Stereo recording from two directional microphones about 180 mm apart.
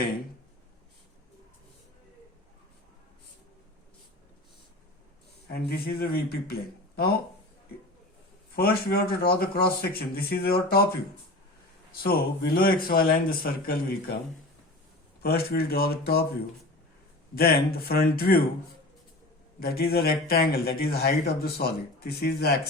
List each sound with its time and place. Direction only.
5.5 s speech: 55° left (ahead or behind)
8.5 s speech: 60° left (ahead or behind)
12.0 s speech: 55° left (ahead or behind)
15.2 s speech: 60° left (ahead or behind)
17.3 s speech: 60° left (ahead or behind)
19.5 s speech: 55° left (ahead or behind)